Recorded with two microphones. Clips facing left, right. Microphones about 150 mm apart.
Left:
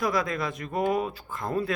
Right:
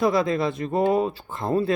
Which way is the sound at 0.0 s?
25° right (ahead or behind).